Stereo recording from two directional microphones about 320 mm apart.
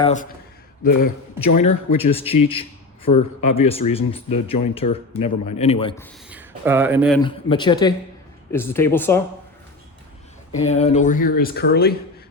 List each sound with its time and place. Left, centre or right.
0.0 s speech: left
1.4 s a man's voice: left
2.0 s a man's voice: centre
6.3 s speech: centre
7.2 s a man's voice: centre
10.7 s speech: left